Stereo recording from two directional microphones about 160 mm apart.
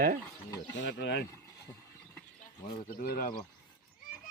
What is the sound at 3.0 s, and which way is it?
Speech, 60° left (ahead or behind).